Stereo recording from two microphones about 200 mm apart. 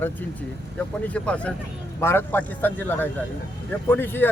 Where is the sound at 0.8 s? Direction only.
5° left (ahead or behind).